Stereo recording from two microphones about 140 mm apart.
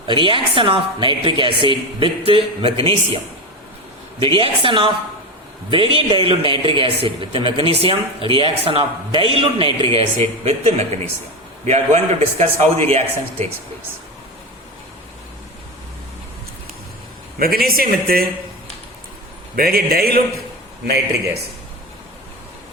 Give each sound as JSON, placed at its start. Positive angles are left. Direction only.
{"t": 0.1, "sound": "speech", "side_deg": -35}
{"t": 4.2, "sound": "a man's voice", "side_deg": -40}
{"t": 17.4, "sound": "speech", "side_deg": -90}
{"t": 19.5, "sound": "speech", "side_deg": -90}